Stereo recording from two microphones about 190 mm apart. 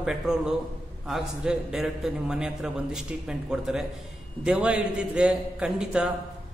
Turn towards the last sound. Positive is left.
turn(degrees=-5)  # may be behind; listen again after turning